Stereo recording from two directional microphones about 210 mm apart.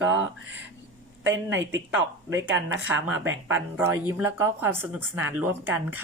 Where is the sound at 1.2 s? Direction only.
65° right (ahead or behind).